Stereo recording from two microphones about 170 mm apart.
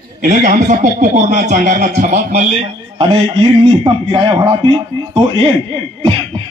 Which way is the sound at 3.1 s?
30° right (ahead or behind).